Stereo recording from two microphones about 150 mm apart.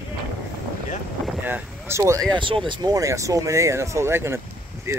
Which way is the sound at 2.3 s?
35° right (ahead or behind).